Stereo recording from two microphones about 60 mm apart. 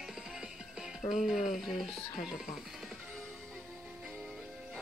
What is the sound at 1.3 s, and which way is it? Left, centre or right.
Speech, centre.